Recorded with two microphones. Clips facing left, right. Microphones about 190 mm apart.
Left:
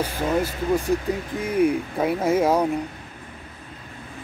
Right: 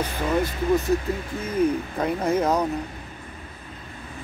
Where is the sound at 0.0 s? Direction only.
10° left (ahead or behind).